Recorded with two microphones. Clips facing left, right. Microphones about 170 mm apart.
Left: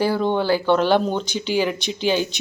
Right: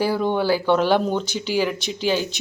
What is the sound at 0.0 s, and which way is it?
Speech, 10° right (ahead or behind).